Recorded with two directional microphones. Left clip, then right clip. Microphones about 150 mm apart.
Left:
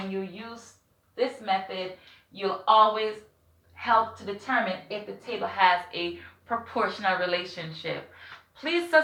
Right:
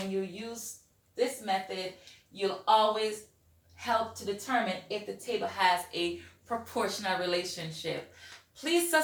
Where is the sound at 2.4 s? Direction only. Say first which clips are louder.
Left 5 dB; 35° right (ahead or behind).